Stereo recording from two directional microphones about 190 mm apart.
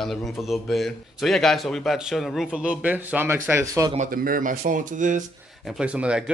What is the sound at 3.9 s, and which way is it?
Speech, 45° right (ahead or behind).